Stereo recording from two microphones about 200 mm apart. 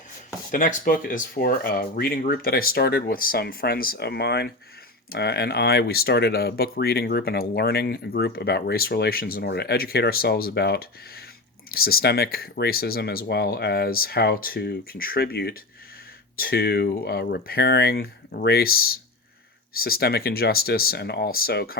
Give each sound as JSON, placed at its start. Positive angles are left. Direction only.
{"t": 0.5, "sound": "speech", "side_deg": 40}